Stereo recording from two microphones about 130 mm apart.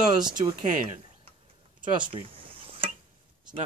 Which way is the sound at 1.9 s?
40° right (ahead or behind).